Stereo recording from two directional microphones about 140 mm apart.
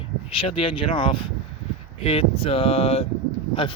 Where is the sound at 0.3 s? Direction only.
40° left (ahead or behind).